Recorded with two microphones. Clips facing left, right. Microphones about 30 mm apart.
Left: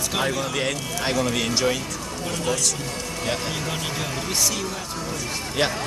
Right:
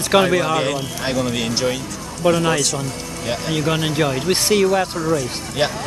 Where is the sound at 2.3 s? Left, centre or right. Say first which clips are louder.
Right 9 dB; right.